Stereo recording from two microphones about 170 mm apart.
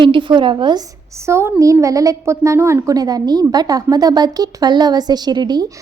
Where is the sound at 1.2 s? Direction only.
15° right (ahead or behind).